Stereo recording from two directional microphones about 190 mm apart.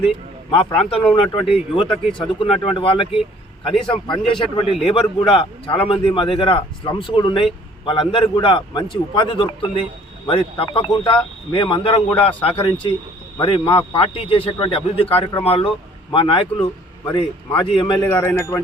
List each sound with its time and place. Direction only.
0.5 s speech: 30° left (ahead or behind)
18.1 s speech: 15° left (ahead or behind)